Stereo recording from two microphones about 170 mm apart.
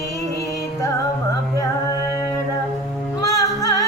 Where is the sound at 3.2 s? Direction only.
20° left (ahead or behind).